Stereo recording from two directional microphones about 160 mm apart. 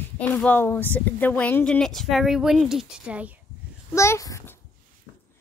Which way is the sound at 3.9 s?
15° left (ahead or behind).